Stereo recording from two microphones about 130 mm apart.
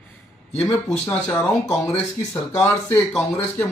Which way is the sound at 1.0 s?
15° left (ahead or behind).